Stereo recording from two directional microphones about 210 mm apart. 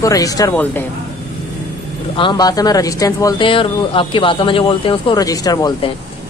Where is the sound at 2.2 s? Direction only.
20° left (ahead or behind).